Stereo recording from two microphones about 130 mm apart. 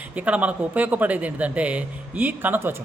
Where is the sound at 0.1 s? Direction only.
10° right (ahead or behind).